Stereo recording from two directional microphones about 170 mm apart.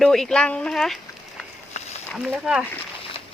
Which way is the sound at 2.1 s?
5° right (ahead or behind).